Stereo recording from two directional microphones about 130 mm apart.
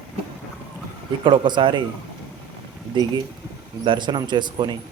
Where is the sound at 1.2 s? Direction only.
40° right (ahead or behind).